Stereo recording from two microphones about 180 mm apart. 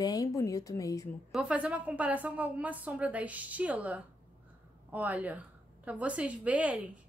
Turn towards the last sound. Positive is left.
turn(degrees=-5)  # may be behind; listen again after turning